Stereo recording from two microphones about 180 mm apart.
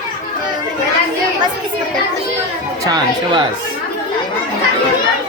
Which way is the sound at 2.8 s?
20° right (ahead or behind).